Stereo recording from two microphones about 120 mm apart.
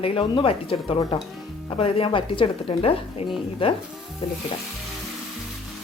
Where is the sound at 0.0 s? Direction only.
50° left (ahead or behind).